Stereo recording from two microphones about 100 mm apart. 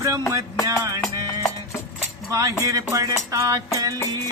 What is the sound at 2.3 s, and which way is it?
Speech, 35° right (ahead or behind).